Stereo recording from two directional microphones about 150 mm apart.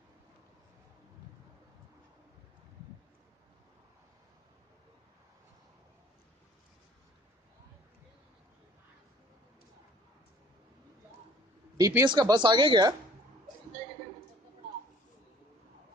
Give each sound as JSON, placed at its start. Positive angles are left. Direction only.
{"t": 11.7, "sound": "speech", "side_deg": -25}